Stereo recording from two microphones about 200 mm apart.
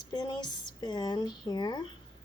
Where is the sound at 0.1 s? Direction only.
20° left (ahead or behind).